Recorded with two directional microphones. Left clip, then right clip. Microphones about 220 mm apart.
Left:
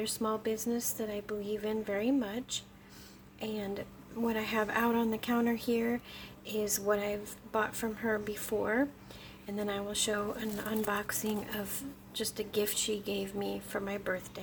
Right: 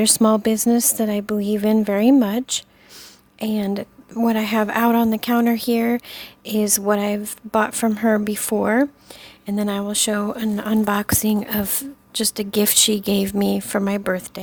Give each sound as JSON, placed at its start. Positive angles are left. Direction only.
{"t": 0.0, "sound": "a woman's voice", "side_deg": -50}